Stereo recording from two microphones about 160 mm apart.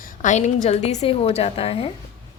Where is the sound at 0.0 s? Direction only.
50° left (ahead or behind).